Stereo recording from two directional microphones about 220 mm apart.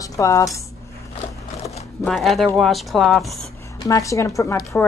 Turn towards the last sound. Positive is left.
turn(degrees=15)  # may be behind; listen again after turning